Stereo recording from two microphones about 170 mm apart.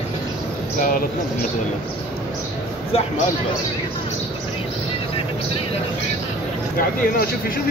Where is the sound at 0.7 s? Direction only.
55° left (ahead or behind).